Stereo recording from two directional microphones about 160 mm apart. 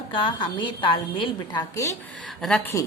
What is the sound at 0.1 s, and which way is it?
A woman's voice, 30° left (ahead or behind).